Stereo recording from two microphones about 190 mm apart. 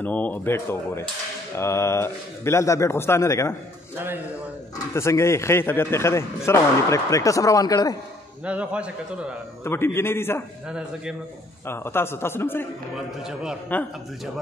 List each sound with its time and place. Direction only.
0.0 s a man's voice: 10° left (ahead or behind)
4.9 s a man's voice: 15° left (ahead or behind)
8.5 s a man's voice: 5° right (ahead or behind)
9.7 s a man's voice: 10° left (ahead or behind)
11.6 s a man's voice: 10° left (ahead or behind)
12.9 s a man's voice: 5° right (ahead or behind)
13.7 s a man's voice: 10° left (ahead or behind)